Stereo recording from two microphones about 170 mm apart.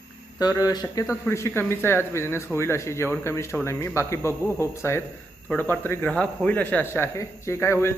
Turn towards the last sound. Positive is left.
turn(degrees=15)  # may be behind; listen again after turning